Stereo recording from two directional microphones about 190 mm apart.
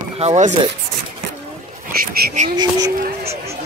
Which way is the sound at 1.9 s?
55° right (ahead or behind).